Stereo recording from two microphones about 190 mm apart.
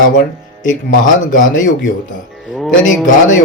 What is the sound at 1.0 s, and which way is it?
Speech, 45° left (ahead or behind).